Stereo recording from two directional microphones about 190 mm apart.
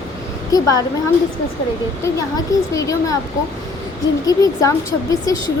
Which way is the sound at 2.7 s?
15° left (ahead or behind).